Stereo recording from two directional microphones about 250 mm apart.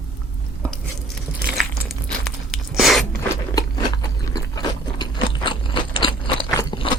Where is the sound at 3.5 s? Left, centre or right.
Centre.